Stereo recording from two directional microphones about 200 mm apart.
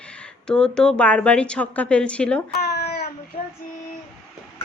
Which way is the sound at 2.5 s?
55° left (ahead or behind).